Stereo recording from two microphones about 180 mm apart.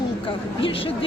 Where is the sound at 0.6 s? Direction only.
30° left (ahead or behind).